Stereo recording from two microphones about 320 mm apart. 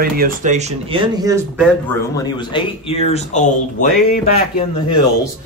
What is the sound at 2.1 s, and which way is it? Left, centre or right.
Speech, centre.